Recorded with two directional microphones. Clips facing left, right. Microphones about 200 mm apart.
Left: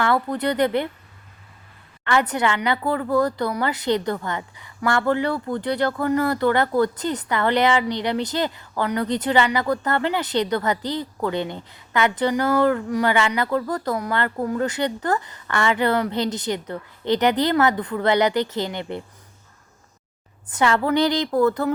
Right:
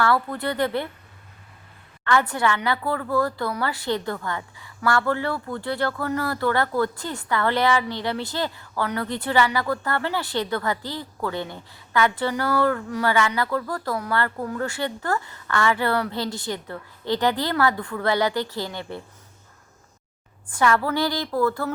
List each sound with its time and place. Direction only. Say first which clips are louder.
0.0 s a woman's voice: left 2 dB; 20° left (ahead or behind)
2.0 s a woman's voice: left 1 dB; 20° left (ahead or behind)
20.5 s a woman's voice: left 2 dB; 20° left (ahead or behind)